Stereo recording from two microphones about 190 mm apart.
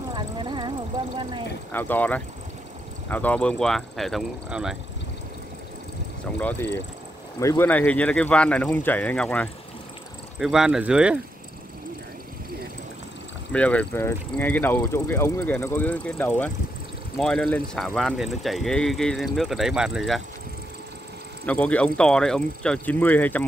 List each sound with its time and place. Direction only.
0.1 s vehicle: 25° right (ahead or behind)
1.7 s speech: 10° left (ahead or behind)
6.4 s speech: 10° left (ahead or behind); by 11.1 s 5° right (ahead or behind)
13.5 s speech: 5° left (ahead or behind)
21.5 s speech: 5° left (ahead or behind)